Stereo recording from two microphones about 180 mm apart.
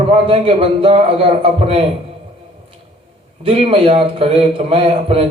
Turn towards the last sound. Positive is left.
turn(degrees=-35)  # may be behind; listen again after turning